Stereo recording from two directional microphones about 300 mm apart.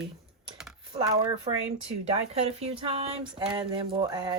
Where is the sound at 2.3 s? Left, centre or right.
Right.